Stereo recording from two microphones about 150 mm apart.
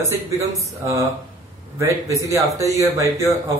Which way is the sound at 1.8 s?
20° right (ahead or behind).